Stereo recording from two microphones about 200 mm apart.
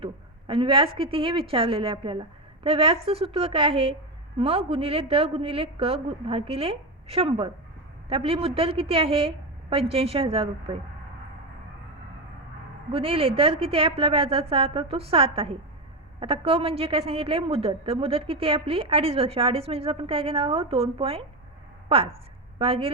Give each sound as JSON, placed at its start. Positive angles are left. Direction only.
{"t": 0.0, "sound": "a sound", "side_deg": -25}
{"t": 0.9, "sound": "a woman's voice", "side_deg": -25}
{"t": 12.9, "sound": "a woman's voice", "side_deg": -30}
{"t": 22.5, "sound": "a woman's voice", "side_deg": -30}